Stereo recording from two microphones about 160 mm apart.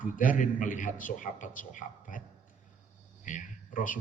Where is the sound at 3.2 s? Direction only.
55° left (ahead or behind).